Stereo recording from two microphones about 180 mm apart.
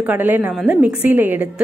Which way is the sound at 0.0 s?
10° right (ahead or behind).